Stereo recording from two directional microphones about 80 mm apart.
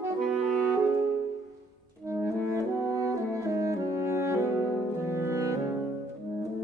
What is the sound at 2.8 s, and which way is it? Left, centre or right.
Brass instrument, right.